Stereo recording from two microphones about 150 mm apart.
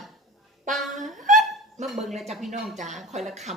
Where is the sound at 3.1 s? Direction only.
50° right (ahead or behind).